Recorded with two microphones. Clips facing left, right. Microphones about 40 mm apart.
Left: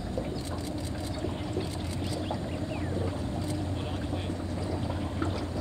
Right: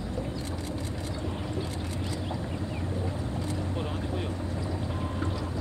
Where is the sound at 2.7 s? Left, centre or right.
Centre.